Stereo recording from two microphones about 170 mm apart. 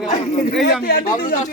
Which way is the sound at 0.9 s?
60° left (ahead or behind).